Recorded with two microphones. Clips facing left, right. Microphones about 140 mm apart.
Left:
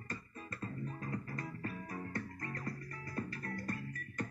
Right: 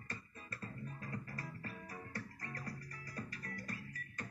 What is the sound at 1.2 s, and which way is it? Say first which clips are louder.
Music: left 5 dB; 55° left (ahead or behind).